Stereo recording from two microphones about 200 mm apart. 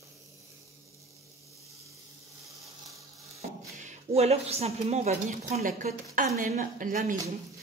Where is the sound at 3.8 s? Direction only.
35° right (ahead or behind).